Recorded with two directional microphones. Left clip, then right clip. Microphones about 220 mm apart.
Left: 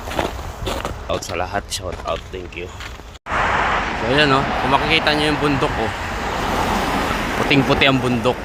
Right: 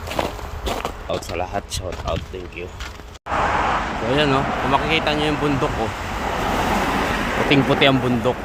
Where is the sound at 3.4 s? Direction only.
50° right (ahead or behind).